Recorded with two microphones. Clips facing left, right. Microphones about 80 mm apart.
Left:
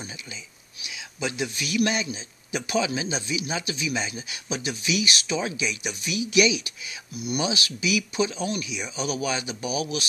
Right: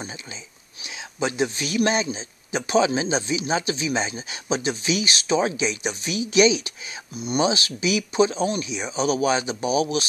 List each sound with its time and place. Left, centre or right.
0.8 s a man's voice: right